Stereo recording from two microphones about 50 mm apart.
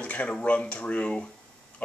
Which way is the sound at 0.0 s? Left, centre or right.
Left.